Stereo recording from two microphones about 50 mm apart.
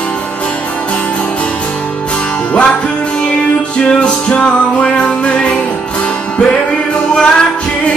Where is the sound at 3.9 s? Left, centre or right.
Left.